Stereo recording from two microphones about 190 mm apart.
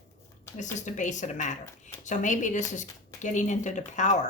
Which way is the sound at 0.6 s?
40° left (ahead or behind).